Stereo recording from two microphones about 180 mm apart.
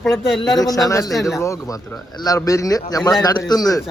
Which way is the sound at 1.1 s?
Centre (ahead or behind).